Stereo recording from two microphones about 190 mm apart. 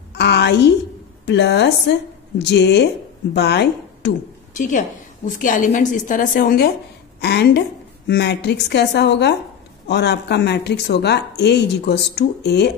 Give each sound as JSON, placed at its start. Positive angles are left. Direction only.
{"t": 0.1, "sound": "a sound", "side_deg": 65}
{"t": 1.2, "sound": "speech", "side_deg": 65}
{"t": 4.6, "sound": "a woman's voice", "side_deg": 40}
{"t": 7.2, "sound": "speech", "side_deg": 60}